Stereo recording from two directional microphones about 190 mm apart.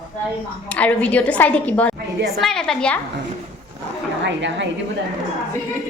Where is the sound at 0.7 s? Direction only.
5° left (ahead or behind).